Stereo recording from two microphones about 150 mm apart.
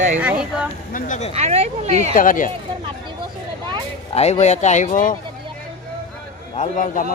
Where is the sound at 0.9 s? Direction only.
55° left (ahead or behind).